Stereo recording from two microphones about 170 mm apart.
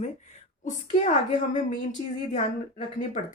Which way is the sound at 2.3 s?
45° left (ahead or behind).